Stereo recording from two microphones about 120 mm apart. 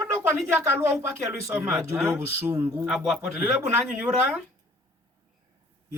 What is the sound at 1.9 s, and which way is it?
Speech, 20° right (ahead or behind).